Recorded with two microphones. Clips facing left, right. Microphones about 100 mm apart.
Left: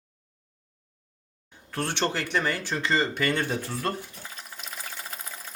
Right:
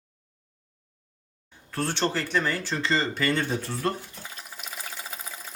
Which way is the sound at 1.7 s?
15° left (ahead or behind).